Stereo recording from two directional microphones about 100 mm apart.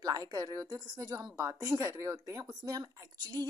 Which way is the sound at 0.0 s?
35° right (ahead or behind).